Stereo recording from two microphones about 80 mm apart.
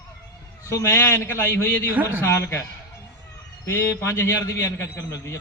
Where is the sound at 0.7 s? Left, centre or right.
Left.